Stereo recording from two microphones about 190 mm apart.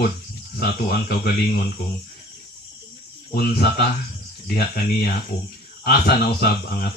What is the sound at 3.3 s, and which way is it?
Speech, 50° left (ahead or behind).